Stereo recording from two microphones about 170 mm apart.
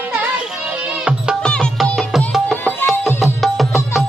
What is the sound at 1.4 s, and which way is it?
Music, 5° left (ahead or behind).